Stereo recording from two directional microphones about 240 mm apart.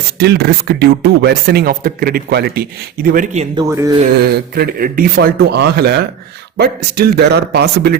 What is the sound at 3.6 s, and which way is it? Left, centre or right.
Speech, centre.